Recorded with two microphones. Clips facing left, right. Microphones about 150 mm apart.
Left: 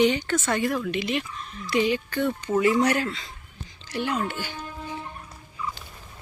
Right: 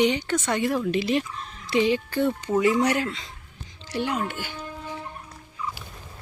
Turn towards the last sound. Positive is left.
turn(degrees=-10)  # may be behind; listen again after turning